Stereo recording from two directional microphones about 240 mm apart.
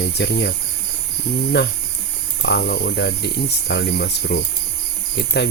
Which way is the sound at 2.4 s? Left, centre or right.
Left.